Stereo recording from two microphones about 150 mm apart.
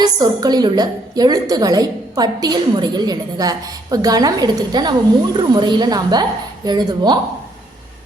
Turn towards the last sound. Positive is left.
turn(degrees=-30)  # may be behind; listen again after turning